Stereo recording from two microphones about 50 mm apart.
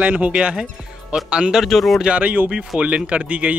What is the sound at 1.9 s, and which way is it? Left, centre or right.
Speech, centre.